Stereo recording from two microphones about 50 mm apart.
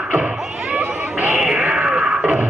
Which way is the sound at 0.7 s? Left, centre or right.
Right.